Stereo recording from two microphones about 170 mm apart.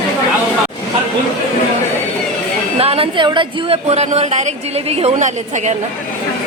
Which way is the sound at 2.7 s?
35° right (ahead or behind).